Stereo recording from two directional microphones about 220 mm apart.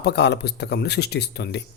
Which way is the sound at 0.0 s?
50° left (ahead or behind).